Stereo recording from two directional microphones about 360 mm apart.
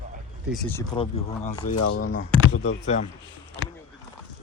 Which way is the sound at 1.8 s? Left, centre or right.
Left.